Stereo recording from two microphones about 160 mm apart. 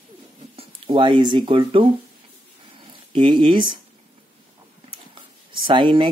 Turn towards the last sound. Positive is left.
turn(degrees=-30)  # may be behind; listen again after turning